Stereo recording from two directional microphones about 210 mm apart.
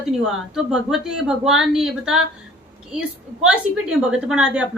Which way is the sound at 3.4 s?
5° right (ahead or behind).